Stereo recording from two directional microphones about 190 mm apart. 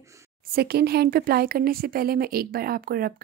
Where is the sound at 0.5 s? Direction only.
55° right (ahead or behind).